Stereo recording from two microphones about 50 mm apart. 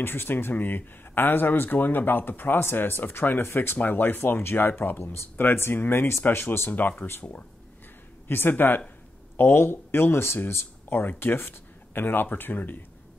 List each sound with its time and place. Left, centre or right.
0.0 s speech: left
6.7 s speech: left
8.3 s speech: left